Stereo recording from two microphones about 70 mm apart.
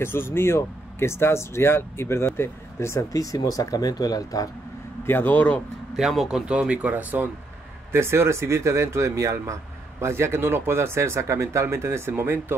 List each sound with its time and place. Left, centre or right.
0.0 s speech: left
5.0 s speech: left
5.9 s speech: centre; by 7.2 s right
7.9 s speech: right